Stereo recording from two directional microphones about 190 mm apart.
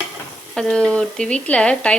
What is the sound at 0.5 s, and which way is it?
Speech, 5° left (ahead or behind).